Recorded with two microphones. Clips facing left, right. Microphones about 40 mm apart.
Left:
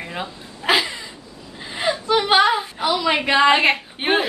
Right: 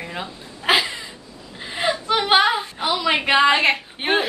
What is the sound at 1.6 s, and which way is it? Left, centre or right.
Gasp, centre.